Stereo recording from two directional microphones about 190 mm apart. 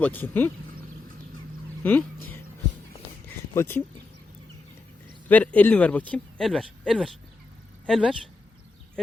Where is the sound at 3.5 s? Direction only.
10° left (ahead or behind).